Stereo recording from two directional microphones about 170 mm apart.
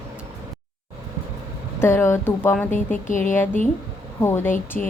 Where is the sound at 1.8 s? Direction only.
15° left (ahead or behind).